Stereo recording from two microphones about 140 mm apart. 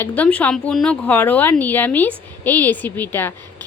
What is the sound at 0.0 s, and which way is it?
Speech, 10° left (ahead or behind).